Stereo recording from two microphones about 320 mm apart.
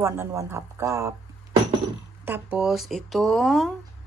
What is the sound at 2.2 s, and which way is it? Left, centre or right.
A woman's voice, centre.